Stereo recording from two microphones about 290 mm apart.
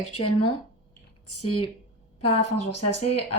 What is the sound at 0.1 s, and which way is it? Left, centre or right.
A woman's voice, left.